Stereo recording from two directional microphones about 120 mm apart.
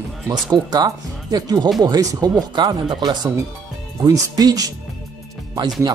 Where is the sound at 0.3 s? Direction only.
35° right (ahead or behind).